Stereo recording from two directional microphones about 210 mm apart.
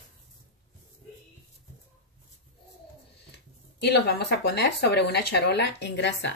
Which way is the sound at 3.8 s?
55° left (ahead or behind).